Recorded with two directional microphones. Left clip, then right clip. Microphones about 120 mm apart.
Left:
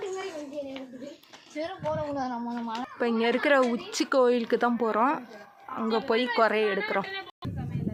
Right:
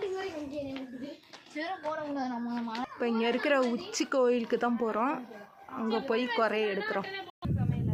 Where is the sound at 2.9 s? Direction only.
50° left (ahead or behind).